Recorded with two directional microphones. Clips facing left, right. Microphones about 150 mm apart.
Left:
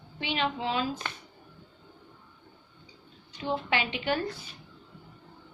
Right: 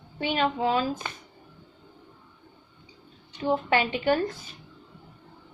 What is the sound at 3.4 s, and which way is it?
Speech, 45° right (ahead or behind).